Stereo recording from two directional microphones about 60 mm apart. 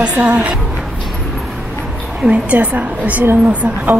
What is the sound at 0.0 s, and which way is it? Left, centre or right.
Speech, right.